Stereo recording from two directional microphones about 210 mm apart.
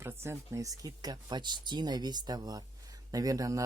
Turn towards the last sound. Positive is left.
turn(degrees=-15)  # may be behind; listen again after turning